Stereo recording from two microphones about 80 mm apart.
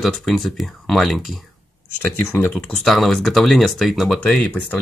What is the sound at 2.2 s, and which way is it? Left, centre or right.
Speech, left.